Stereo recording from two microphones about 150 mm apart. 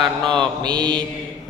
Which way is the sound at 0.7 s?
30° right (ahead or behind).